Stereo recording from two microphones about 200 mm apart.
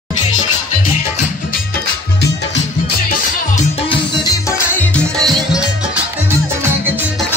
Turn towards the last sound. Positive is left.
turn(degrees=0)  # may be behind; listen again after turning